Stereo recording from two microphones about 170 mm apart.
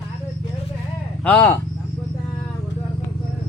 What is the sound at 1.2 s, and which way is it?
Speech, 10° left (ahead or behind).